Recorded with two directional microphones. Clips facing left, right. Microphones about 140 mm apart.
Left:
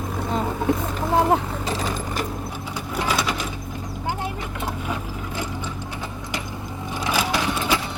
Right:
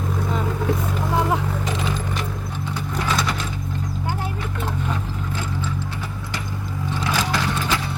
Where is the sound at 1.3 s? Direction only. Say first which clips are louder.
Left 2 dB; 35° left (ahead or behind).